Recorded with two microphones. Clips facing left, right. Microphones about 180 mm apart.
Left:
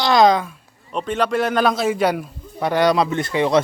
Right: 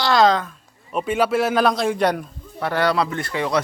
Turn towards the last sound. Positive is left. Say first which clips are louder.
# left 5 dB
turn(degrees=20)  # may be behind; listen again after turning